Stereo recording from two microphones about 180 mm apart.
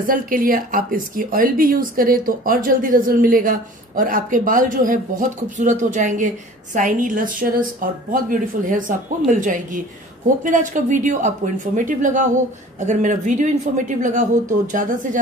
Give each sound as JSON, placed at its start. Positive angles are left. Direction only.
{"t": 0.0, "sound": "speech", "side_deg": -50}